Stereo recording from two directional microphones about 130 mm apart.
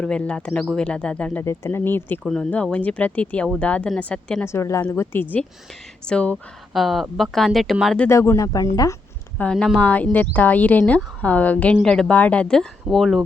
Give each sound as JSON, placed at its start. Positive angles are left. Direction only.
{"t": 0.0, "sound": "speech", "side_deg": 10}
{"t": 2.2, "sound": "speech", "side_deg": 5}
{"t": 4.4, "sound": "a woman's voice", "side_deg": 20}
{"t": 8.1, "sound": "a woman's voice", "side_deg": 20}
{"t": 9.4, "sound": "speech", "side_deg": 5}